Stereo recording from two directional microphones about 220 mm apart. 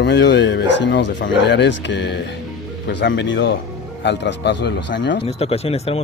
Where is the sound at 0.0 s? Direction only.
50° left (ahead or behind).